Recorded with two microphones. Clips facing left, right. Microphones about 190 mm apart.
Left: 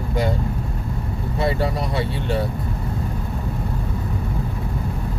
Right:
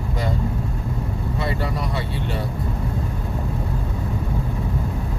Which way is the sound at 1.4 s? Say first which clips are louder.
Left 5 dB; 30° left (ahead or behind).